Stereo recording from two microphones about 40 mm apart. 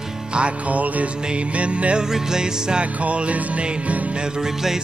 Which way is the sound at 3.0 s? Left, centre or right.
Right.